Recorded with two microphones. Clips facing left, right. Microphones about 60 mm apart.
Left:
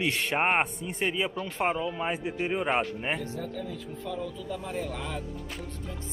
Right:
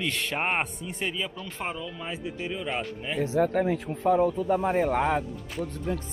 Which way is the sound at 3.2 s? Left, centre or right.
Right.